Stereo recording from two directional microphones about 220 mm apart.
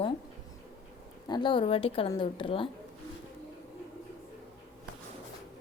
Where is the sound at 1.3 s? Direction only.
20° left (ahead or behind).